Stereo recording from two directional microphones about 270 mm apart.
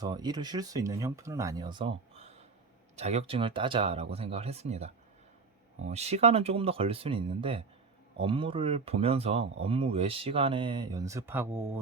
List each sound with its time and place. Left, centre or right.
0.0 s speech: centre
5.9 s speech: right; by 11.7 s centre